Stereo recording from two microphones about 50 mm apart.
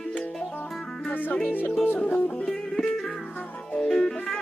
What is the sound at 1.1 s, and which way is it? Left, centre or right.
Music, left.